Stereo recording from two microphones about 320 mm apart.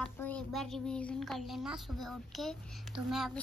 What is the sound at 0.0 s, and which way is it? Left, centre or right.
A child's voice, centre.